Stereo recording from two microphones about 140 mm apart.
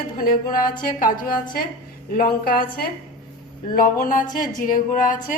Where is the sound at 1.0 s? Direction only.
75° left (ahead or behind).